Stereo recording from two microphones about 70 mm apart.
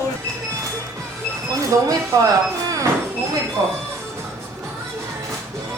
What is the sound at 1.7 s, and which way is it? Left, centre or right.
Speech, right.